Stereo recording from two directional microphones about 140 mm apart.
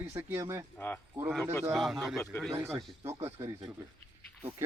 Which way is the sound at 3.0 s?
20° right (ahead or behind).